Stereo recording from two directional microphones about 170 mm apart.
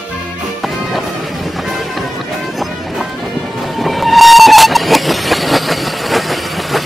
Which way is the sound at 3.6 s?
Centre (ahead or behind).